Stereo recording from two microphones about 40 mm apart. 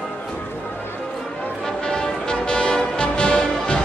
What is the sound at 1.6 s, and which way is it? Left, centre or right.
Music, centre.